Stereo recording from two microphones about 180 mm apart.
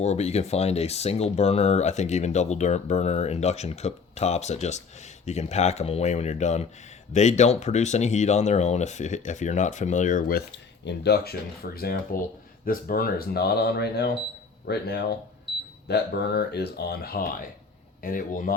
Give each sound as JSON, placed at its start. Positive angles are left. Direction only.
{"t": 0.0, "sound": "speech", "side_deg": 35}
{"t": 10.8, "sound": "speech", "side_deg": 65}